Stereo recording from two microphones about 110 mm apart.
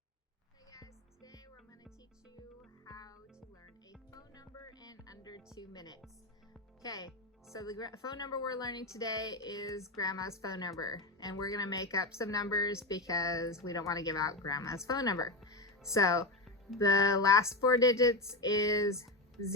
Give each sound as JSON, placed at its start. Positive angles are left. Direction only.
{"t": 0.7, "sound": "music", "side_deg": 30}
{"t": 2.8, "sound": "music", "side_deg": 35}
{"t": 5.5, "sound": "speech", "side_deg": 40}